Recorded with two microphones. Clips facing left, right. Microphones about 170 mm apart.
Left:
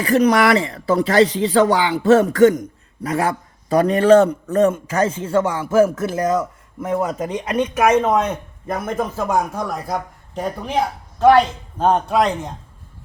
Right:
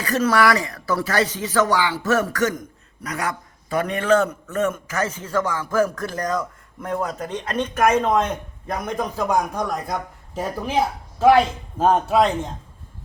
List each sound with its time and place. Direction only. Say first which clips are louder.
0.0 s speech: left 4 dB; 20° left (ahead or behind)
6.2 s speech: left 5 dB; 10° left (ahead or behind)